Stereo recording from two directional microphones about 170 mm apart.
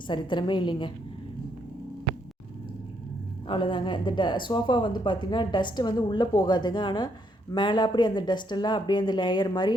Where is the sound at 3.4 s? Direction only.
30° left (ahead or behind).